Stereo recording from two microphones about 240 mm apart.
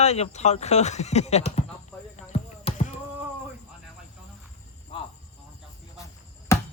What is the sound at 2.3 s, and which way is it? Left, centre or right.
Basketball bounce, left.